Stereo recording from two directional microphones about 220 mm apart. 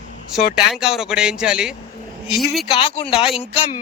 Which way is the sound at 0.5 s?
Centre (ahead or behind).